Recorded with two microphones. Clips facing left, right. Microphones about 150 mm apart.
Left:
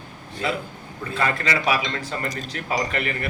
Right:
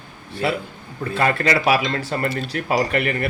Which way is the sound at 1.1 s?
45° right (ahead or behind).